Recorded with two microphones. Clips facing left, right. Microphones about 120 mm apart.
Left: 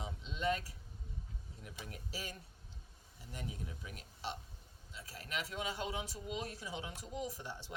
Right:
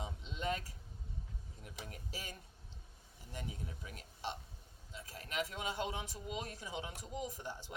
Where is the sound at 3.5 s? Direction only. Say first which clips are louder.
Left 1 dB; 35° right (ahead or behind).